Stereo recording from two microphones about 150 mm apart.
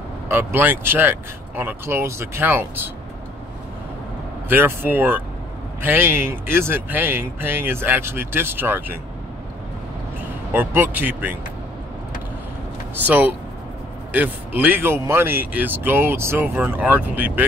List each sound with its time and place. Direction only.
0.3 s speech: 15° right (ahead or behind)
4.5 s speech: 15° right (ahead or behind)
10.5 s speech: 15° right (ahead or behind)
13.0 s speech: 10° right (ahead or behind)